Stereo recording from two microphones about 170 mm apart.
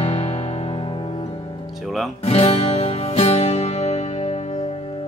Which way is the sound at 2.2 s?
35° left (ahead or behind).